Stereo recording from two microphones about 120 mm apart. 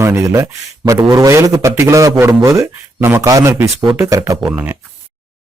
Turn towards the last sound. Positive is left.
turn(degrees=-15)  # may be behind; listen again after turning